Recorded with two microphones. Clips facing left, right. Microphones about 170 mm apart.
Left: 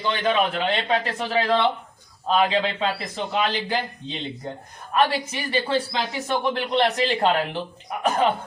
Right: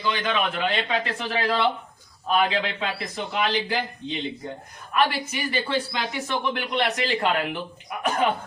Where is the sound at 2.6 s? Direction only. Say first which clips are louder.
Left 4 dB; 30° left (ahead or behind).